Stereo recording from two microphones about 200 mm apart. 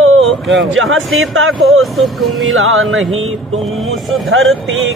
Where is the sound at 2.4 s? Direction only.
90° right.